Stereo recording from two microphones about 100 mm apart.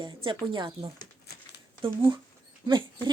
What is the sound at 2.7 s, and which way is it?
Speech, 50° right (ahead or behind).